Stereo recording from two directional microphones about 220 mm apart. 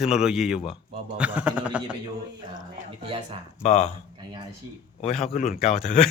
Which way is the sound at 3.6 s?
30° left (ahead or behind).